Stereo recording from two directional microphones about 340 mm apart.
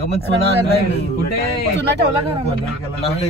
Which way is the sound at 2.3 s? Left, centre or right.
Centre.